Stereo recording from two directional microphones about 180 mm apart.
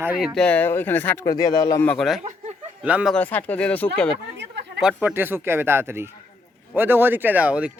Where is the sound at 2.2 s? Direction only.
40° right (ahead or behind).